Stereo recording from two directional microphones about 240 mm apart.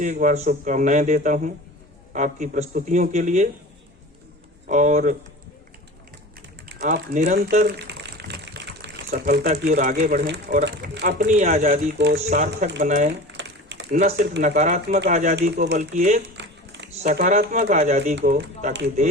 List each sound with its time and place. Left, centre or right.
0.0 s a man's voice: right
4.7 s a man's voice: right
6.7 s speech: right
11.3 s a man's voice: right
11.9 s a man's voice: right
13.1 s typing: right
13.9 s a man's voice: right
15.4 s speech: right
15.8 s speech: right
16.3 s a sound: right
17.0 s a man's voice: right